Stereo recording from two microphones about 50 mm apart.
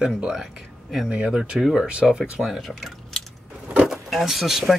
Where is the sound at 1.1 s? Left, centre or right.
Right.